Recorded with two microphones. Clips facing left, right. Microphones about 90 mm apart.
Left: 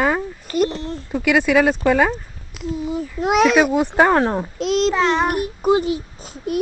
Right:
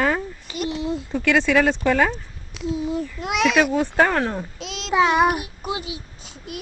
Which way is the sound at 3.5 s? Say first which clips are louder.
Left 3 dB; 10° left (ahead or behind).